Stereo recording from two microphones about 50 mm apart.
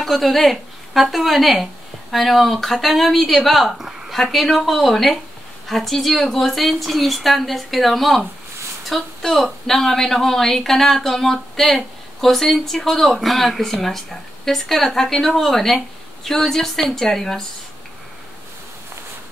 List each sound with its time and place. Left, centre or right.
0.0 s a woman's voice: centre